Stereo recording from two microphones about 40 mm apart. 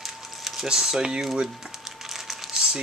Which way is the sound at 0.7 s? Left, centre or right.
Centre.